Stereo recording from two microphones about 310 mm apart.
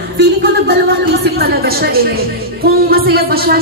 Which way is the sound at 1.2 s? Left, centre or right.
Right.